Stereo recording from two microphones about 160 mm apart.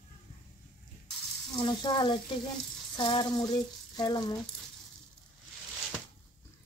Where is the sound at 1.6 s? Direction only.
30° left (ahead or behind).